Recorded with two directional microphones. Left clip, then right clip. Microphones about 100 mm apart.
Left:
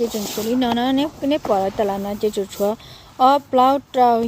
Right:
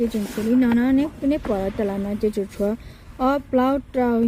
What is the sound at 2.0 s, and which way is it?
Speech, 10° left (ahead or behind).